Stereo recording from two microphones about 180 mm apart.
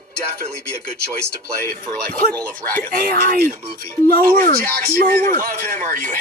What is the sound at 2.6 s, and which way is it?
Speech, 10° left (ahead or behind).